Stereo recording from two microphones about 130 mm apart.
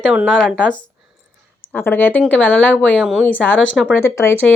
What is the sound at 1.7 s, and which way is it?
A woman's voice, 15° left (ahead or behind).